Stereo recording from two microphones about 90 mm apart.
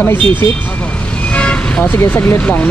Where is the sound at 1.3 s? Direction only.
15° left (ahead or behind).